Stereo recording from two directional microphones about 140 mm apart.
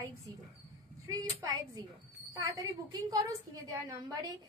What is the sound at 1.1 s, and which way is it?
Speech, 25° right (ahead or behind).